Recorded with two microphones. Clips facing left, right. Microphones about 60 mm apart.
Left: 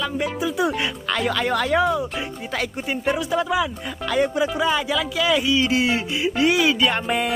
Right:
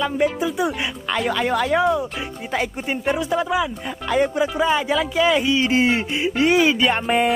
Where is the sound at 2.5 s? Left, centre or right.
Right.